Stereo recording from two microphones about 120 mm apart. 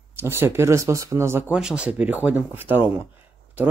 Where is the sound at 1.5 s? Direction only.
10° right (ahead or behind).